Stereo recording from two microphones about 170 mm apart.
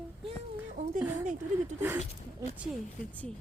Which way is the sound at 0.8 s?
45° right (ahead or behind).